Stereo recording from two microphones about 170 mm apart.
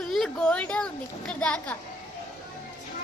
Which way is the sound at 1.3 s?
5° left (ahead or behind).